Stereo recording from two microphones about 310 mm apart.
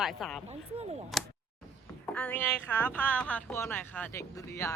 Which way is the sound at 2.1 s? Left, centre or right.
Centre.